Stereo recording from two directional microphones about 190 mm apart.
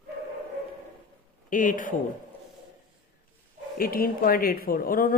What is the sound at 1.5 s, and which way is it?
Speech, 45° left (ahead or behind).